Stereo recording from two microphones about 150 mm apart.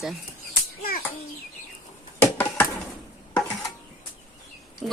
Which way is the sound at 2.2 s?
10° left (ahead or behind).